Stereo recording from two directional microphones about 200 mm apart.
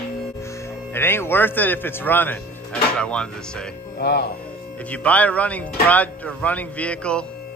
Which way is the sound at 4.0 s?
55° left (ahead or behind).